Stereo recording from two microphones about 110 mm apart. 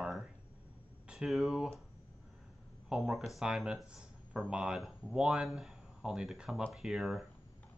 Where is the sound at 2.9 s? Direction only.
Centre (ahead or behind).